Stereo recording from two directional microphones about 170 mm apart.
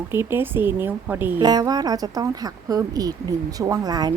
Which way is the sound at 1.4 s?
25° right (ahead or behind).